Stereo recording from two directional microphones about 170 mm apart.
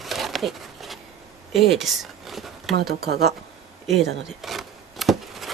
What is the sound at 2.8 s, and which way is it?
Speech, 70° right (ahead or behind).